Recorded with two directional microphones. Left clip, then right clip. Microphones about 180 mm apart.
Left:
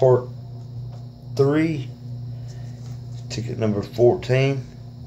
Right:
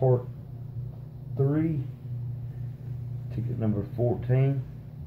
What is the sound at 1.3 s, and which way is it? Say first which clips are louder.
Speech: left 9 dB; 35° left (ahead or behind).